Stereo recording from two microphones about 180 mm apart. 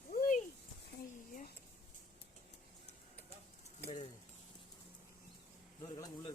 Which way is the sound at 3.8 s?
30° left (ahead or behind).